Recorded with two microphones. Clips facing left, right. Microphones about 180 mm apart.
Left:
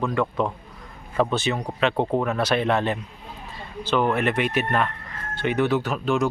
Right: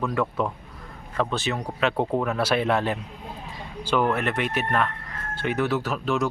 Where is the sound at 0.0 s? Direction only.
5° right (ahead or behind).